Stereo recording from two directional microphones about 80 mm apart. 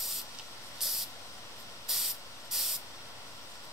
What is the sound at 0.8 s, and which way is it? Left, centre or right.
Vehicle, centre.